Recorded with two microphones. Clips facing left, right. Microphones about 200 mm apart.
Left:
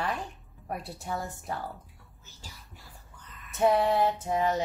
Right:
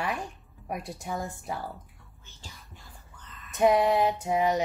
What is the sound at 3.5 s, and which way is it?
Speech, 15° right (ahead or behind).